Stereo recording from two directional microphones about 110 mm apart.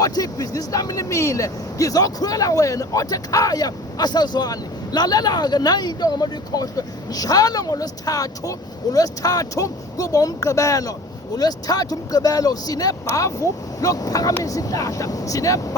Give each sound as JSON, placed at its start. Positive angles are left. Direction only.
{"t": 0.0, "sound": "speech", "side_deg": 35}